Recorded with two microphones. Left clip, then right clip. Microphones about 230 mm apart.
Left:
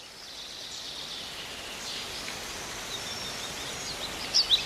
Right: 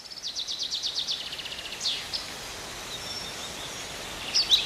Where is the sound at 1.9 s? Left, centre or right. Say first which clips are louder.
Right 9 dB; centre.